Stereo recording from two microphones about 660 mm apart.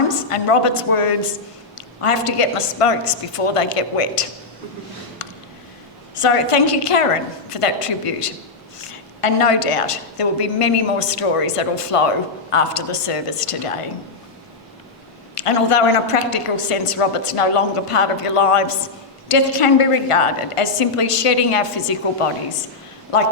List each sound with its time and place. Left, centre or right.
0.1 s a woman's voice: left
6.1 s a woman's voice: left
15.4 s a woman's voice: left